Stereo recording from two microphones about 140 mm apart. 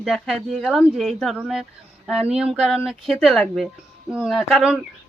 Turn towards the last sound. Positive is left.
turn(degrees=-5)  # may be behind; listen again after turning